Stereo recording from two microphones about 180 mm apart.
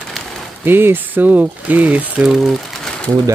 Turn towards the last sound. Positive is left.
turn(degrees=5)  # may be behind; listen again after turning